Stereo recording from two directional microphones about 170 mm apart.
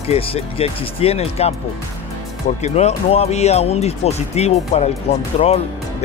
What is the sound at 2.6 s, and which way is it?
Speech, 40° left (ahead or behind).